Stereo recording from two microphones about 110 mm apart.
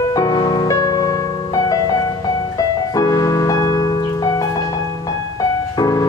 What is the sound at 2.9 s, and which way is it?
Music, 35° left (ahead or behind).